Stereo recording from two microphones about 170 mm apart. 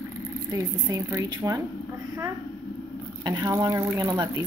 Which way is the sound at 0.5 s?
15° right (ahead or behind).